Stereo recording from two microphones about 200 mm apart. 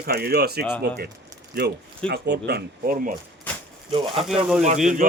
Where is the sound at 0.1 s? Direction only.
50° right (ahead or behind).